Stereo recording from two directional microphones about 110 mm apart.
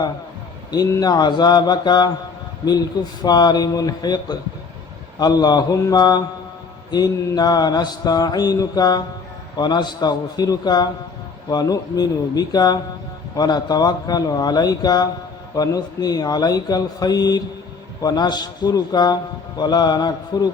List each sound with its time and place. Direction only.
0.7 s a man's voice: 35° left (ahead or behind)